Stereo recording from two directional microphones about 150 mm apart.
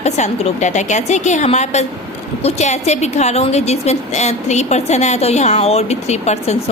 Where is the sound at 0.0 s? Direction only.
50° left (ahead or behind).